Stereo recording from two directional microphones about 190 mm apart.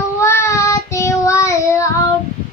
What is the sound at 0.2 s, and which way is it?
Child singing, 15° left (ahead or behind).